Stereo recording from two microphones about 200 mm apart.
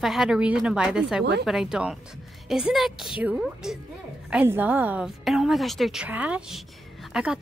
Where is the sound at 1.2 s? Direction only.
55° right (ahead or behind).